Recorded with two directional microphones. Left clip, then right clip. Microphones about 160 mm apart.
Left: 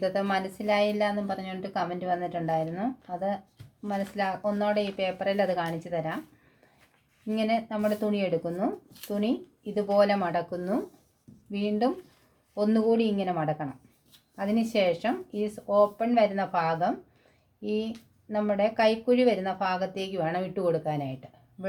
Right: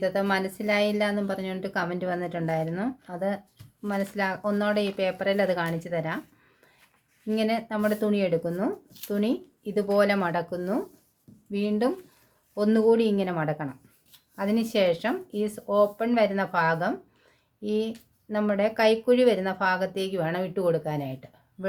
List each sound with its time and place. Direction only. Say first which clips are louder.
0.0 s speech: right 2 dB; 15° right (ahead or behind)
7.3 s speech: right 1 dB; 20° right (ahead or behind)